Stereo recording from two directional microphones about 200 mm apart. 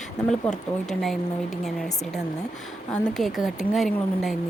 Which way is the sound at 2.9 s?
Centre (ahead or behind).